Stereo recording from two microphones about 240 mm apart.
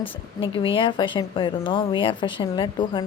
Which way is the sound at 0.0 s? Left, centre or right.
Left.